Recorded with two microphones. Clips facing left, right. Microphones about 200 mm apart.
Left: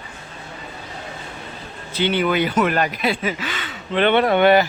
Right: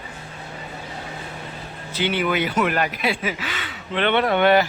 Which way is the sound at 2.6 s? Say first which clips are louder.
Left 2 dB; 40° left (ahead or behind).